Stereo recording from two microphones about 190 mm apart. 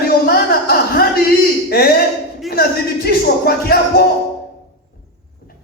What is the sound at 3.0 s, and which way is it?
Speech, 55° left (ahead or behind).